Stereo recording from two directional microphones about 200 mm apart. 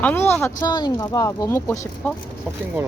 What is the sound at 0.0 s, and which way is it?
Speech, 10° left (ahead or behind).